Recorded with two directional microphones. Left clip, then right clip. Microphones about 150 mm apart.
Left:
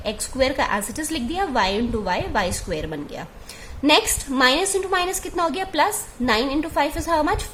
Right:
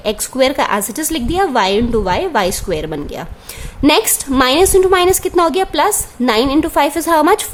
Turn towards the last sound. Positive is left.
turn(degrees=-50)  # may be behind; listen again after turning